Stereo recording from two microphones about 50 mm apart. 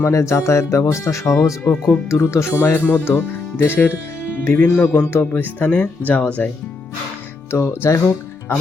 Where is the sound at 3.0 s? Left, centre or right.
Left.